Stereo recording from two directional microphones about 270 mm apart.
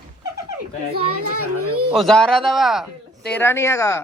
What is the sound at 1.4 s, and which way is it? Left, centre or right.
Speech, right.